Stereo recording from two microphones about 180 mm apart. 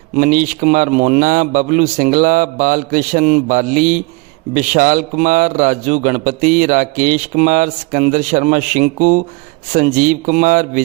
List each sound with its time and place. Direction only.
0.2 s a man's voice: 50° right (ahead or behind)